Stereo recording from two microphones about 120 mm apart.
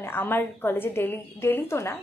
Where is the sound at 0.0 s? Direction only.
15° left (ahead or behind).